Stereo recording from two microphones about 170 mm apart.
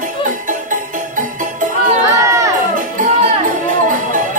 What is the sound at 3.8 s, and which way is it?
Music, 50° right (ahead or behind).